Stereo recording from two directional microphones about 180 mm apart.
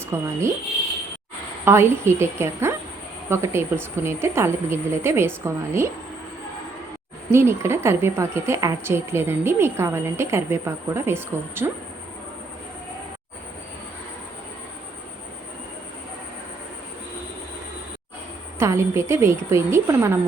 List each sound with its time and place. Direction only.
0.1 s a woman's voice: 15° right (ahead or behind)
1.6 s a woman's voice: 15° right (ahead or behind)
7.3 s a woman's voice: 15° right (ahead or behind)
18.6 s a woman's voice: 15° right (ahead or behind)